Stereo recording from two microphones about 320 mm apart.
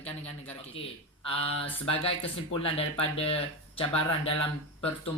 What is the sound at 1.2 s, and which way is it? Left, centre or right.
Speech, centre.